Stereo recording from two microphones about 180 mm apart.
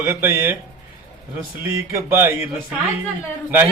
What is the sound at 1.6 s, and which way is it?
Speech, 10° right (ahead or behind).